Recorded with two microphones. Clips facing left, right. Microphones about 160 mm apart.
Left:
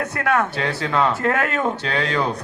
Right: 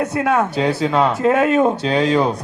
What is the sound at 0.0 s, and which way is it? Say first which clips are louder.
A man's voice: right 4 dB; 20° right (ahead or behind).